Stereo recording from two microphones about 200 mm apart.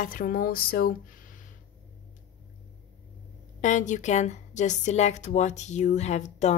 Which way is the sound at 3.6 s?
40° left (ahead or behind).